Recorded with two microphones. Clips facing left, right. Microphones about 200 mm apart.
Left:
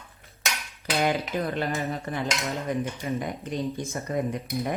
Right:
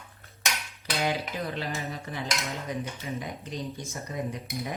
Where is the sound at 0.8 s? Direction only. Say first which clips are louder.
Left 4 dB; 55° left (ahead or behind).